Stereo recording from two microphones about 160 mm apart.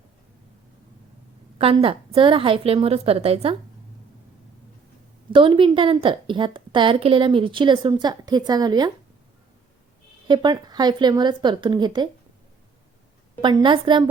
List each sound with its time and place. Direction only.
1.5 s a woman's voice: 35° right (ahead or behind)
5.3 s a woman's voice: 30° right (ahead or behind)
10.2 s a woman's voice: 30° right (ahead or behind)
13.4 s a woman's voice: 30° right (ahead or behind)